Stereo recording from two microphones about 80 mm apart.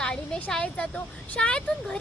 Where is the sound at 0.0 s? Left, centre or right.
Centre.